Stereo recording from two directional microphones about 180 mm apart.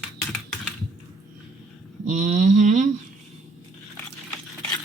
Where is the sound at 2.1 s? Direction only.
40° right (ahead or behind).